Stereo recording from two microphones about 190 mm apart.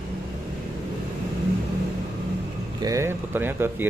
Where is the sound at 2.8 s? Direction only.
15° right (ahead or behind).